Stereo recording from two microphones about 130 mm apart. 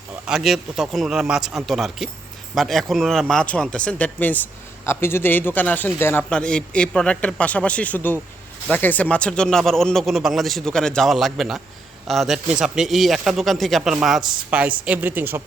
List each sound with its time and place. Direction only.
0.3 s a man's voice: 5° right (ahead or behind)